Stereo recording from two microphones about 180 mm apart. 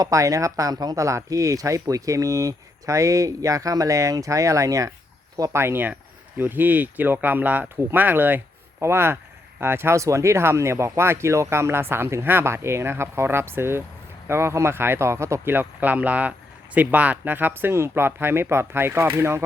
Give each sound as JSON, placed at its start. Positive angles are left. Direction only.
{"t": 0.0, "sound": "speech", "side_deg": -20}